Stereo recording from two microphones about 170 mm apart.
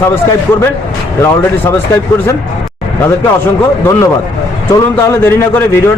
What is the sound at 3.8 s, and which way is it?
A man's voice, 15° left (ahead or behind).